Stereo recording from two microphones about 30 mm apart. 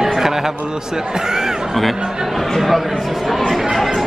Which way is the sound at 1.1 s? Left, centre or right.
Centre.